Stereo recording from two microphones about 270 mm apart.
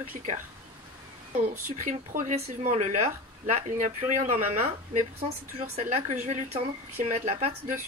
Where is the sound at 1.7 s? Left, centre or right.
Right.